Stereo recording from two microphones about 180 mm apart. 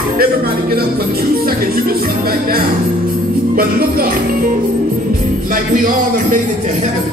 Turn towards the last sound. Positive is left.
turn(degrees=-50)  # may be behind; listen again after turning